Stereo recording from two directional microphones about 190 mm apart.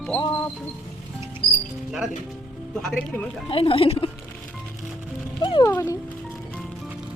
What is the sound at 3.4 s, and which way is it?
Speech, 30° left (ahead or behind).